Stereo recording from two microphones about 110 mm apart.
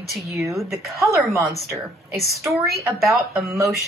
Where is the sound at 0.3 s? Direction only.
25° right (ahead or behind).